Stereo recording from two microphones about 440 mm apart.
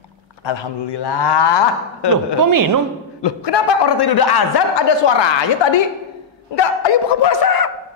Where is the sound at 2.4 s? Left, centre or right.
Right.